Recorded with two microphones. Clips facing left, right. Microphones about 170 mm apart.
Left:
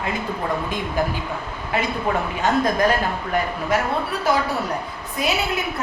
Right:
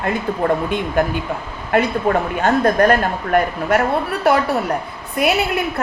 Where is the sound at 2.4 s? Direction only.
55° right (ahead or behind).